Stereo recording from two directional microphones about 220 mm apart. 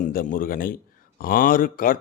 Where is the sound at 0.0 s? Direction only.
40° left (ahead or behind).